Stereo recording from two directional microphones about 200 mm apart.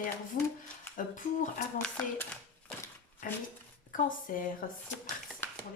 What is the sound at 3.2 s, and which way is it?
Speech, 40° left (ahead or behind).